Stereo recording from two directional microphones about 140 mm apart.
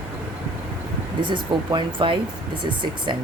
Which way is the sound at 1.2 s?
35° right (ahead or behind).